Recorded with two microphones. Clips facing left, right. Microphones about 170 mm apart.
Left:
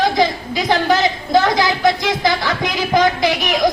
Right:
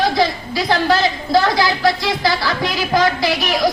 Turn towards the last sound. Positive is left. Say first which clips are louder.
# left 1 dB
turn(degrees=20)  # may be behind; listen again after turning